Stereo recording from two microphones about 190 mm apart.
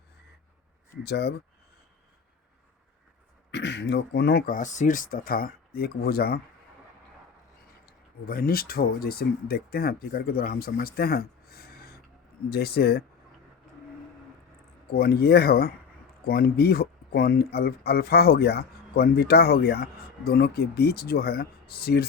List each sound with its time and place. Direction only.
1.0 s speech: 60° left (ahead or behind)
3.5 s speech: 65° left (ahead or behind)
7.9 s speech: 50° left (ahead or behind)
14.9 s speech: 55° left (ahead or behind)